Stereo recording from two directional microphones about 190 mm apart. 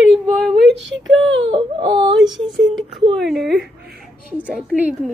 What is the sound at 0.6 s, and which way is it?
Speech, 70° right (ahead or behind).